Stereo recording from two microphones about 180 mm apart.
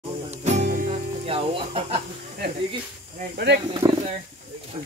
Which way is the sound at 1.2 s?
30° right (ahead or behind).